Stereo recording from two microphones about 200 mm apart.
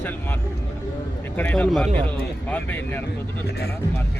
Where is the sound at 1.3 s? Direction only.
10° left (ahead or behind).